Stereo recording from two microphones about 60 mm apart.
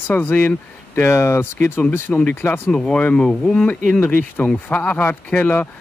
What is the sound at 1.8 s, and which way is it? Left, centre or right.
Speech, left.